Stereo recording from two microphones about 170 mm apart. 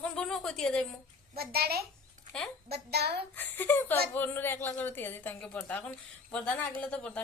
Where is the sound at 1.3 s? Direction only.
65° right (ahead or behind).